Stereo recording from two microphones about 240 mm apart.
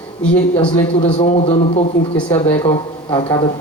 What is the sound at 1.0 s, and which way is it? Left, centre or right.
Speech, left.